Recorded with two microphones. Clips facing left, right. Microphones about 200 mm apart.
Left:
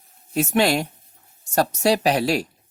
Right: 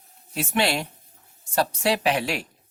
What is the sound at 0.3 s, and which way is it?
Speech, 45° left (ahead or behind).